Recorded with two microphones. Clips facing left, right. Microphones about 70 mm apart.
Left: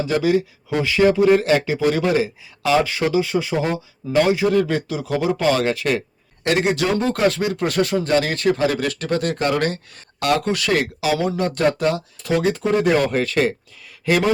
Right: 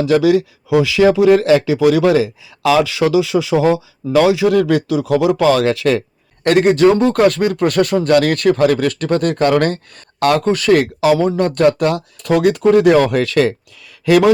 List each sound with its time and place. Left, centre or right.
0.0 s speech: right
6.4 s speech: right